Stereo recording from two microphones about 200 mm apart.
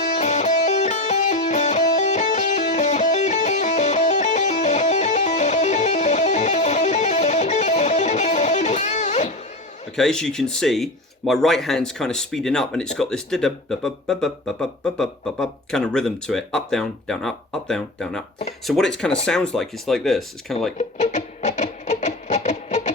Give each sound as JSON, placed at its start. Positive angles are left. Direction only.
{"t": 0.0, "sound": "music", "side_deg": 35}
{"t": 9.9, "sound": "speech", "side_deg": 5}
{"t": 20.7, "sound": "music", "side_deg": 35}